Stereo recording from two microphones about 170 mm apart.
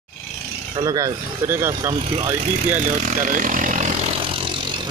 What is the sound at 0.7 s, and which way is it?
Speech, 20° right (ahead or behind).